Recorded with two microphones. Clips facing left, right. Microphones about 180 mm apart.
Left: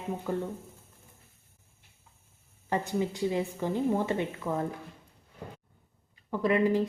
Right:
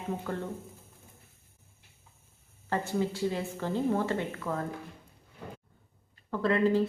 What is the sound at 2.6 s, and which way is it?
A woman's voice, 15° left (ahead or behind).